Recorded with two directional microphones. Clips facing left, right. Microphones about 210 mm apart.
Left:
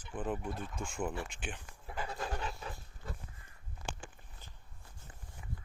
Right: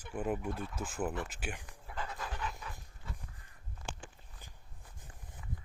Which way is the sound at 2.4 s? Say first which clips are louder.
Left 1 dB; 35° left (ahead or behind).